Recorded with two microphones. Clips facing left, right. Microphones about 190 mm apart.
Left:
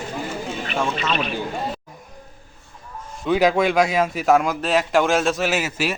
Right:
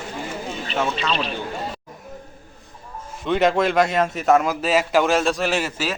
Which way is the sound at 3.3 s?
Centre (ahead or behind).